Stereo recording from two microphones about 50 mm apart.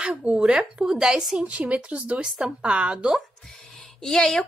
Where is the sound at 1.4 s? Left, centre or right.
Right.